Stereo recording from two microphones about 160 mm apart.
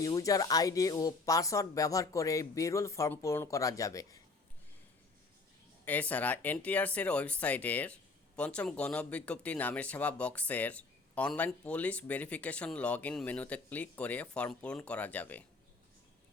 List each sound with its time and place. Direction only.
0.0 s speech: 20° left (ahead or behind)
5.8 s speech: 10° left (ahead or behind)